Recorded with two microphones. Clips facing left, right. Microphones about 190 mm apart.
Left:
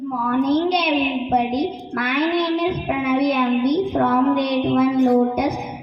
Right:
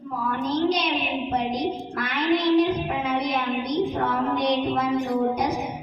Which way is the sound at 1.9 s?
60° left (ahead or behind).